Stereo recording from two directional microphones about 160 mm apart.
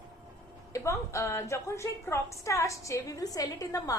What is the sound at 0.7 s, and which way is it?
A woman's voice, 20° left (ahead or behind).